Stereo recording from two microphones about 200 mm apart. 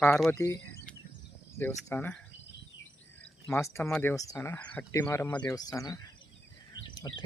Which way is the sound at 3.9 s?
10° left (ahead or behind).